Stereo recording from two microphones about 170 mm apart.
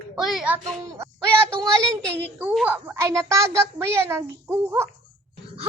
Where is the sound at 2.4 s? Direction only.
10° right (ahead or behind).